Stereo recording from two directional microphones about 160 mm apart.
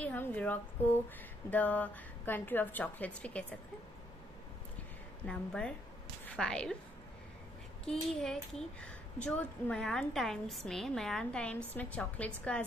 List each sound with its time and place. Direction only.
0.0 s a woman's voice: 10° left (ahead or behind)
5.2 s a woman's voice: 5° left (ahead or behind)
7.8 s a woman's voice: 5° left (ahead or behind)